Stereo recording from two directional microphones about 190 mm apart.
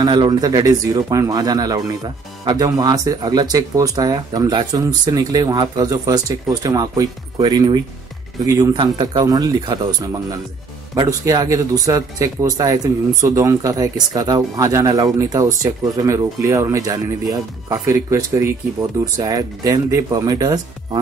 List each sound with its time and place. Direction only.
0.0 s speech: 25° right (ahead or behind)